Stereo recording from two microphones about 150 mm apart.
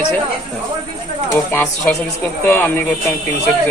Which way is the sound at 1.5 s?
10° left (ahead or behind).